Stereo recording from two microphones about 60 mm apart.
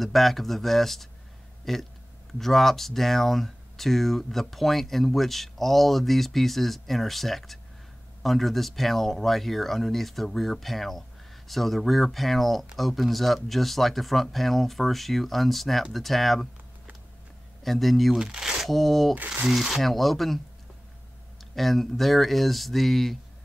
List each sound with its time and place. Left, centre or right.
0.0 s speech: centre
17.6 s speech: centre
18.2 s speech: centre
19.1 s speech: right
19.4 s speech: centre
21.4 s speech: centre